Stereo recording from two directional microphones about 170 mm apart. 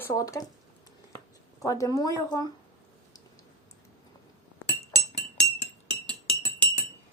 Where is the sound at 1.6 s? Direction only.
20° left (ahead or behind).